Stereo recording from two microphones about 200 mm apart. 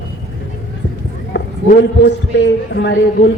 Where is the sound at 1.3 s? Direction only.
60° left (ahead or behind).